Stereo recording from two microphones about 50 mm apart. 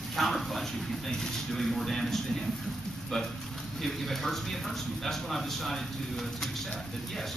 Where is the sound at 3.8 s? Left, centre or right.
Centre.